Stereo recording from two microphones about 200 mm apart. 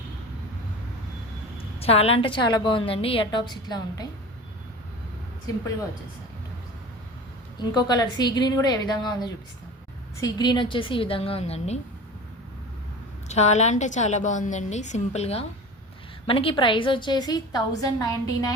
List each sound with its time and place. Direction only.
1.8 s a woman's voice: 30° left (ahead or behind)
7.6 s a woman's voice: 20° left (ahead or behind)
13.2 s a woman's voice: 35° left (ahead or behind); by 18.5 s 15° left (ahead or behind)